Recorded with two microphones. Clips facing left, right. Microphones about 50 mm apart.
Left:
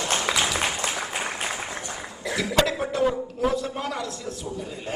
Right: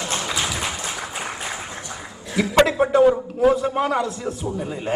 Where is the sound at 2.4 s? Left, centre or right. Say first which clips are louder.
Right 7 dB; right.